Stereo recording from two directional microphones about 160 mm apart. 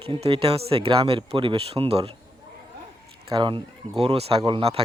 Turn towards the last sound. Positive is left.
turn(degrees=-40)  # may be behind; listen again after turning